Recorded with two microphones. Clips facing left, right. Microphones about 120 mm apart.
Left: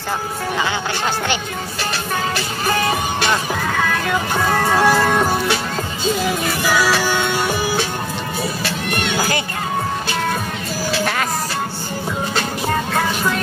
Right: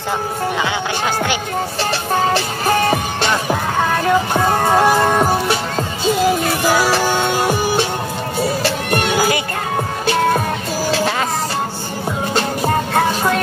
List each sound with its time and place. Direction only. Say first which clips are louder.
4.0 s speech: right 4 dB; 25° right (ahead or behind)
6.7 s music: right 1 dB; 30° right (ahead or behind)
12.4 s music: right 5 dB; 35° right (ahead or behind)